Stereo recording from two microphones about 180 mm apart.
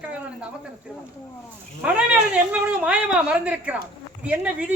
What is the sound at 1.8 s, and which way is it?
A woman's voice, 5° right (ahead or behind).